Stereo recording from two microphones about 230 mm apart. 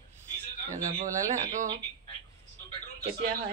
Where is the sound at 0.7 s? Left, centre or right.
Right.